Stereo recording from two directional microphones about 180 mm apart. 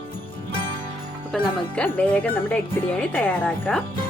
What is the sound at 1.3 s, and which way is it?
Speech, 5° left (ahead or behind).